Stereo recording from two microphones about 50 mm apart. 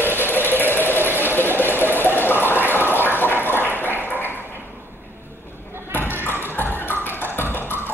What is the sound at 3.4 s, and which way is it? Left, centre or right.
Ping, left.